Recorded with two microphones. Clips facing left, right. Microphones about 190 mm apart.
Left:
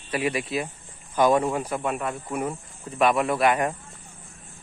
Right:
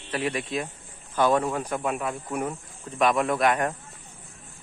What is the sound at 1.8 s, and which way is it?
Speech, centre (ahead or behind).